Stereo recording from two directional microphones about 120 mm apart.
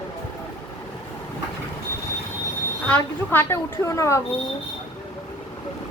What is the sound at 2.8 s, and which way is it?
Speech, 15° left (ahead or behind).